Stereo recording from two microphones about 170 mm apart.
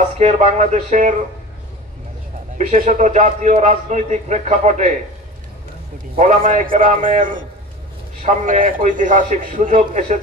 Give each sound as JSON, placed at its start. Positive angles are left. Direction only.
{"t": 0.2, "sound": "a man's voice", "side_deg": -45}
{"t": 2.5, "sound": "a man's voice", "side_deg": -45}
{"t": 6.1, "sound": "a man's voice", "side_deg": -45}